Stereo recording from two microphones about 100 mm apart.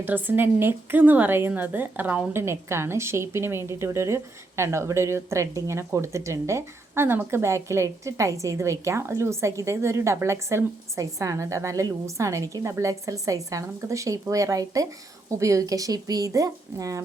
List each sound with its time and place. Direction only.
0.0 s a woman's voice: 20° right (ahead or behind); by 17.0 s 35° right (ahead or behind)